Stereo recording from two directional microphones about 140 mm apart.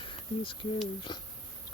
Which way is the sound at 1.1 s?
30° left (ahead or behind).